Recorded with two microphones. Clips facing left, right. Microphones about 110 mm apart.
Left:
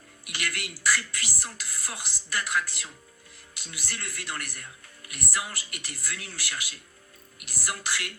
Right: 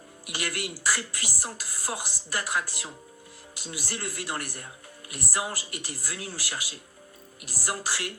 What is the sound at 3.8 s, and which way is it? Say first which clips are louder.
Speech: right 3 dB; 15° right (ahead or behind).